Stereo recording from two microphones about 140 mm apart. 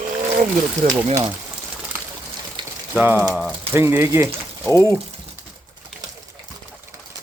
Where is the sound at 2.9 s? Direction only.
15° right (ahead or behind).